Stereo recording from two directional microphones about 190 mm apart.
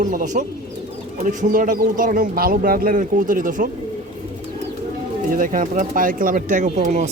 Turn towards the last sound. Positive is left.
turn(degrees=-40)  # may be behind; listen again after turning